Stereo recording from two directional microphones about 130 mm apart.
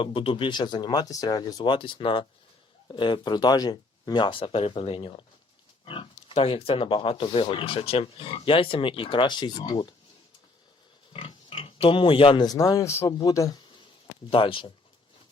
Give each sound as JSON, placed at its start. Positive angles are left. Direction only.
{"t": 0.0, "sound": "speech", "side_deg": 45}
{"t": 11.1, "sound": "speech", "side_deg": 45}
{"t": 12.5, "sound": "speech", "side_deg": 25}
{"t": 14.3, "sound": "speech", "side_deg": 45}